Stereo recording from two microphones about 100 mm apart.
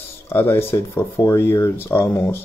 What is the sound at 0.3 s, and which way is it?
Speech, 25° left (ahead or behind).